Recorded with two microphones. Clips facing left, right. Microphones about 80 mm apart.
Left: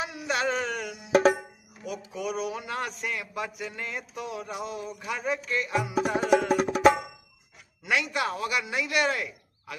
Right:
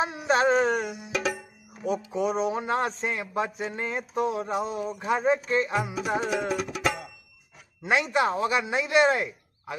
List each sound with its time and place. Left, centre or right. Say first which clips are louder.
0.0 s carnatic music: right 6 dB; right
1.1 s music: left 9 dB; left
1.8 s a man's voice: right 8 dB; right
6.5 s music: left 7 dB; left
7.8 s speech: right 4 dB; right